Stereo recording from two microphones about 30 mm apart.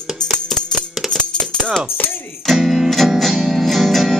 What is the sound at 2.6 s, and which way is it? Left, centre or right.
Music, centre.